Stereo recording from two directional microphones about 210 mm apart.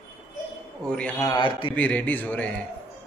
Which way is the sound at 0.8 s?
5° left (ahead or behind).